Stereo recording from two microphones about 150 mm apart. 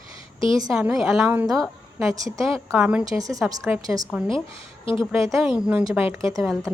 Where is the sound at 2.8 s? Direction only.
5° right (ahead or behind).